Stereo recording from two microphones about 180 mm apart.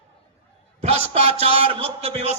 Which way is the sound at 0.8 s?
35° right (ahead or behind).